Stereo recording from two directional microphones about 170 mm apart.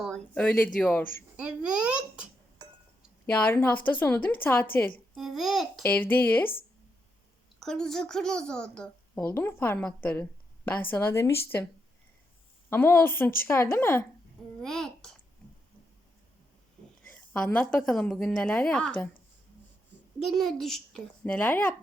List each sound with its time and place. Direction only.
0.0 s a woman's voice: 5° left (ahead or behind)
1.4 s a child's voice: 5° right (ahead or behind)
3.2 s a woman's voice: 10° left (ahead or behind)
5.1 s a child's voice: centre (ahead or behind)
5.8 s a woman's voice: 10° left (ahead or behind)
7.6 s a child's voice: centre (ahead or behind)
12.7 s a woman's voice: 10° left (ahead or behind)
14.6 s babbling: 5° left (ahead or behind)
17.1 s a woman's voice: 10° left (ahead or behind)
20.2 s a child's voice: centre (ahead or behind)